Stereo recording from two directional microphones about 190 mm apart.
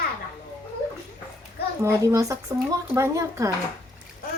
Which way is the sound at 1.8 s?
15° right (ahead or behind).